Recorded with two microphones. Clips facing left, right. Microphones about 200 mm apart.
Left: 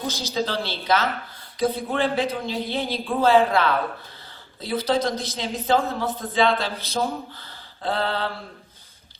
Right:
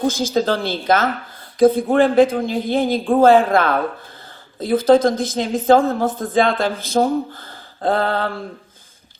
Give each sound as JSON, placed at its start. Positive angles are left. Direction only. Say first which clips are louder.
{"t": 0.0, "sound": "speech", "louder": "right 8 dB", "side_deg": -50}